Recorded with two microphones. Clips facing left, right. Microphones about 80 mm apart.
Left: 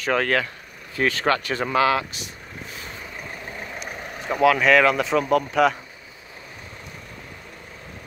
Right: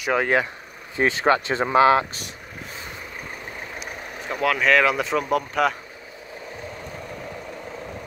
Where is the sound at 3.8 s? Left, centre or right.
Centre.